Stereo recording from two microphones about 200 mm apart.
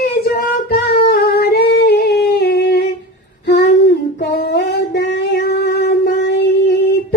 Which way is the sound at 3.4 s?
55° left (ahead or behind).